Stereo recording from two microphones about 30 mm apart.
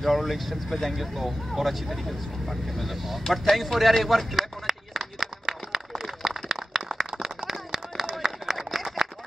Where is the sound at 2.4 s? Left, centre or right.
Centre.